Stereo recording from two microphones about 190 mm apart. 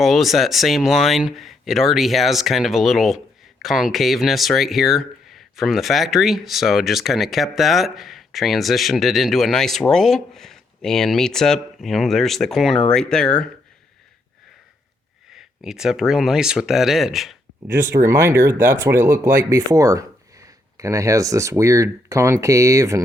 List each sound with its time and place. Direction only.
0.0 s speech: centre (ahead or behind)
15.3 s speech: centre (ahead or behind)
17.8 s speech: 15° right (ahead or behind)